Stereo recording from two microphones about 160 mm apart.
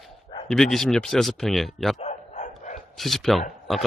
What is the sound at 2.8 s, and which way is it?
Speech, centre (ahead or behind).